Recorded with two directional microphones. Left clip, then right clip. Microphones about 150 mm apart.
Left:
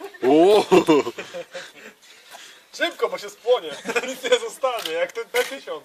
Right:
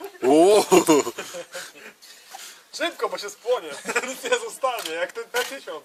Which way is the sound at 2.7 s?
25° left (ahead or behind).